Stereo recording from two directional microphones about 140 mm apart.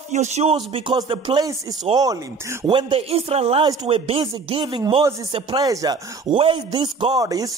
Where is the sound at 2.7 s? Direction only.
35° right (ahead or behind).